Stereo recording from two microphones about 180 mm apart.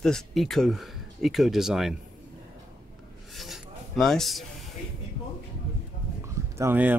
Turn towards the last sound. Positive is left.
turn(degrees=-10)  # may be behind; listen again after turning